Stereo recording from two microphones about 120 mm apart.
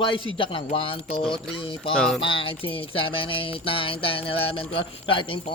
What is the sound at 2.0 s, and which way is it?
Speech, 5° left (ahead or behind).